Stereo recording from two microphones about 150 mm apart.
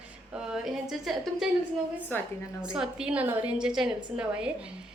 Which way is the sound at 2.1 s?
15° left (ahead or behind).